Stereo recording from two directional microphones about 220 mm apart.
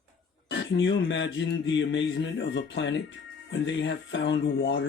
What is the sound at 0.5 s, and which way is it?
Speech, 55° left (ahead or behind).